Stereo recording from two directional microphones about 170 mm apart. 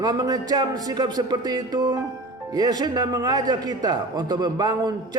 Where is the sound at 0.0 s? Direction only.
25° right (ahead or behind).